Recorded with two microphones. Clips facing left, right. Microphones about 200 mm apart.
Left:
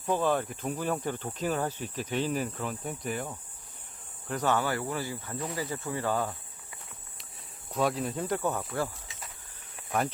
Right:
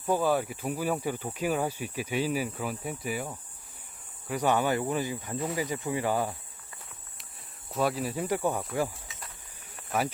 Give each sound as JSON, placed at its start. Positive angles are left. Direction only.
{"t": 0.0, "sound": "speech", "side_deg": -10}
{"t": 7.7, "sound": "speech", "side_deg": 0}